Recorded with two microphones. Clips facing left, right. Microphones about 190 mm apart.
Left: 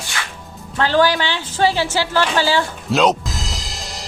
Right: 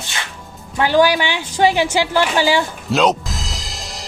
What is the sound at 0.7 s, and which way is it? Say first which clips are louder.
A woman's voice: right 2 dB; 15° right (ahead or behind).